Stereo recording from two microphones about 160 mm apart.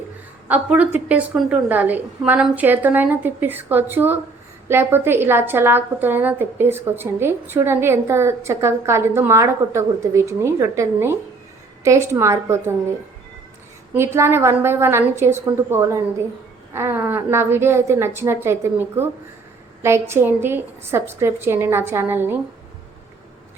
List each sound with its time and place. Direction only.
0.4 s a woman's voice: 10° right (ahead or behind)
13.9 s a woman's voice: 15° right (ahead or behind)